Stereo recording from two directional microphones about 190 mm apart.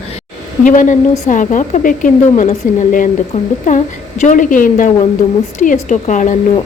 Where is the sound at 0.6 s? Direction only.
40° left (ahead or behind).